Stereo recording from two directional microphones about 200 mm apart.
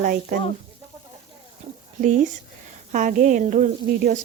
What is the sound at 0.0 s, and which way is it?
Speech, 45° right (ahead or behind).